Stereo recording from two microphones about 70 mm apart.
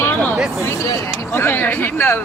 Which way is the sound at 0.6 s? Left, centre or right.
Left.